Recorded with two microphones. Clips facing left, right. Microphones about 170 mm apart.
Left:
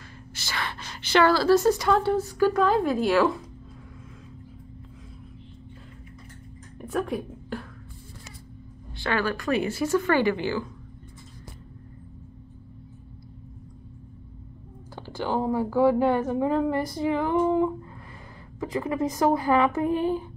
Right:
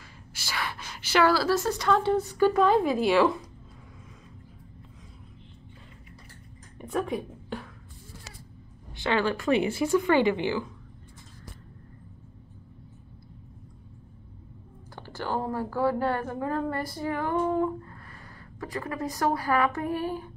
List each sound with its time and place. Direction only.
0.3 s a sound: 10° right (ahead or behind)
1.6 s speech: 5° left (ahead or behind)
6.8 s a woman's voice: centre (ahead or behind)
8.9 s speech: 20° right (ahead or behind)
15.0 s a sound: 15° left (ahead or behind)
15.7 s a woman's voice: 15° left (ahead or behind)